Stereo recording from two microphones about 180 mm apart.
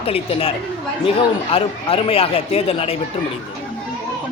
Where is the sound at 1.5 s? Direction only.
30° left (ahead or behind).